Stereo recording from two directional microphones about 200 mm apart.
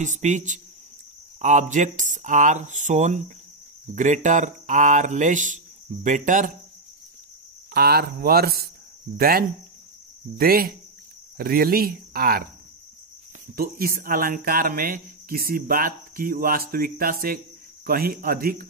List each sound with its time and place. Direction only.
0.0 s speech: 35° right (ahead or behind)
7.7 s speech: 50° right (ahead or behind)
13.6 s speech: 45° right (ahead or behind)